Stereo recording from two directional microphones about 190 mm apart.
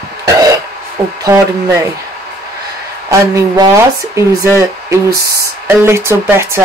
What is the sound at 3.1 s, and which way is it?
Speech, 15° right (ahead or behind).